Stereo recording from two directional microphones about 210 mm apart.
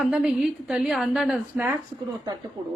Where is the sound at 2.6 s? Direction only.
25° right (ahead or behind).